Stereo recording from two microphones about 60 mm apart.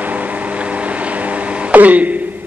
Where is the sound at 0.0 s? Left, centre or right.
Right.